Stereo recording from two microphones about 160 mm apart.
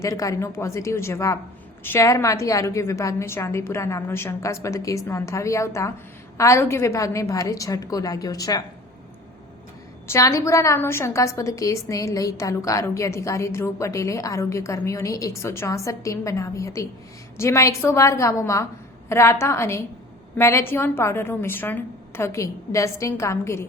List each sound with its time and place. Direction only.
0.0 s a woman's voice: 20° left (ahead or behind)
10.1 s a woman's voice: 20° left (ahead or behind)